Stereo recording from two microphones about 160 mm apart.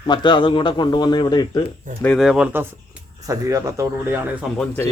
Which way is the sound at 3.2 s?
20° right (ahead or behind).